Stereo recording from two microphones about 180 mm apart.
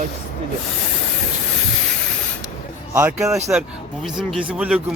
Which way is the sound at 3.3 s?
Centre (ahead or behind).